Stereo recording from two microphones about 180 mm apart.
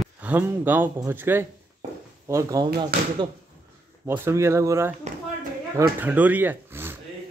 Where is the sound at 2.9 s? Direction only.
55° right (ahead or behind).